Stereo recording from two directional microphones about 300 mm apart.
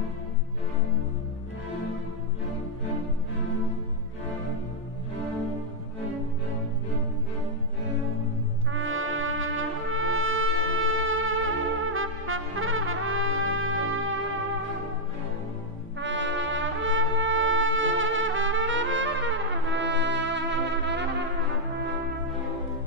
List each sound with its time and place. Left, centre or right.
8.7 s brass instrument: right
16.0 s music: right